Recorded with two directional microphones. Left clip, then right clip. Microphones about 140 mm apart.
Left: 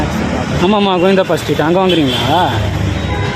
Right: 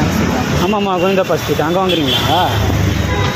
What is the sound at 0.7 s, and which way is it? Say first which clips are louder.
Speech: left 4 dB; 45° left (ahead or behind).